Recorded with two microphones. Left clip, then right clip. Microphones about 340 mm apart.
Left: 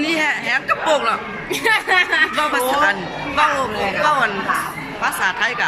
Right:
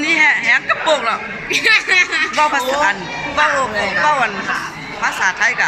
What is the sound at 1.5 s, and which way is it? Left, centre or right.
Speech, centre.